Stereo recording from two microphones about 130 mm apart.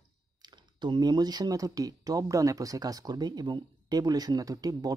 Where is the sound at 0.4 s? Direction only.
35° right (ahead or behind).